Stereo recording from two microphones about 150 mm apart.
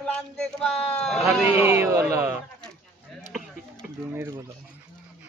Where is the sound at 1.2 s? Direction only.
15° right (ahead or behind).